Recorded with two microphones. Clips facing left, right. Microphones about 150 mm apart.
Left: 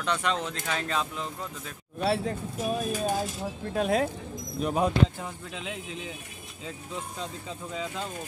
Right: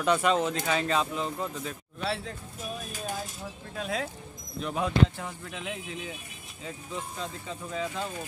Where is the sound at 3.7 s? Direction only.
55° left (ahead or behind).